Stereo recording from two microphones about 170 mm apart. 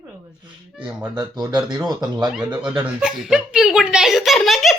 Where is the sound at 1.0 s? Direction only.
25° right (ahead or behind).